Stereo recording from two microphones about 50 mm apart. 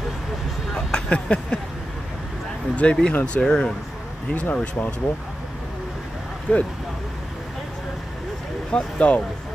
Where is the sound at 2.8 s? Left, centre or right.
Left.